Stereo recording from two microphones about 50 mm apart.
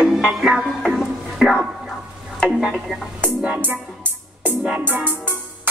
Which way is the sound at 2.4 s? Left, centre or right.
Left.